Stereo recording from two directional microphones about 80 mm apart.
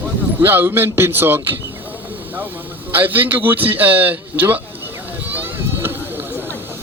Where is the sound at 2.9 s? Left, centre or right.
Right.